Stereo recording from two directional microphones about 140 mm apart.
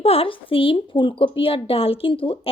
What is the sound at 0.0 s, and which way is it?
A woman's voice, 40° left (ahead or behind).